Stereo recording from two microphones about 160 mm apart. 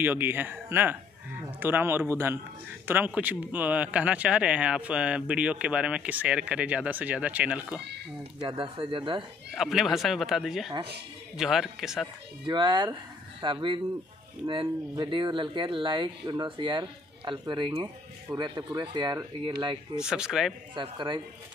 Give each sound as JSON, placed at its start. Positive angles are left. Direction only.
{"t": 0.0, "sound": "speech", "side_deg": -15}
{"t": 8.4, "sound": "speech", "side_deg": -30}
{"t": 9.6, "sound": "speech", "side_deg": 0}
{"t": 12.4, "sound": "speech", "side_deg": -30}
{"t": 20.0, "sound": "speech", "side_deg": -5}
{"t": 20.7, "sound": "speech", "side_deg": -30}